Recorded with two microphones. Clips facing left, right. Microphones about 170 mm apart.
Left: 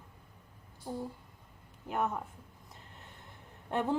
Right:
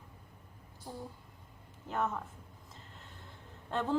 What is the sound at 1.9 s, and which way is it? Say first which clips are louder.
Speech: left 1 dB; 15° left (ahead or behind).